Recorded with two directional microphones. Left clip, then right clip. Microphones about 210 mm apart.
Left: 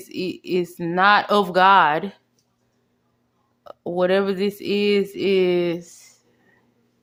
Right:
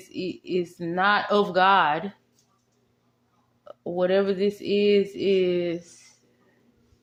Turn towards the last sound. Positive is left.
turn(degrees=25)  # may be behind; listen again after turning